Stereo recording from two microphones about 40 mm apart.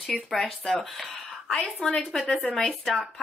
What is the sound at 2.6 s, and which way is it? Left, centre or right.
Speech, centre.